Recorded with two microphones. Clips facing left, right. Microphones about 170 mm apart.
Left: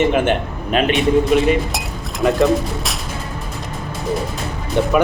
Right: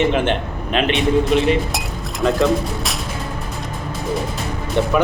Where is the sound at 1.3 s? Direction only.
5° left (ahead or behind).